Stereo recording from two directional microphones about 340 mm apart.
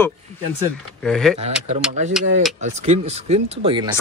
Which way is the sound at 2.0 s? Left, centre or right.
Centre.